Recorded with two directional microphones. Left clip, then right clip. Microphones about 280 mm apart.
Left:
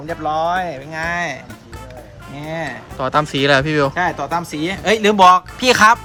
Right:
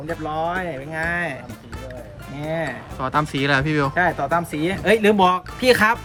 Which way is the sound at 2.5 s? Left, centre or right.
Centre.